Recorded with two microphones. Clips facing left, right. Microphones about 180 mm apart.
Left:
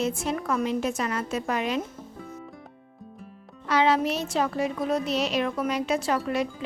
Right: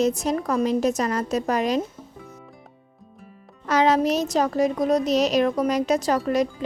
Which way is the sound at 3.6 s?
40° right (ahead or behind).